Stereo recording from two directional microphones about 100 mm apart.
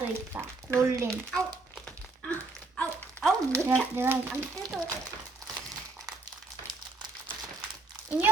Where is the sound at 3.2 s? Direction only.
5° left (ahead or behind).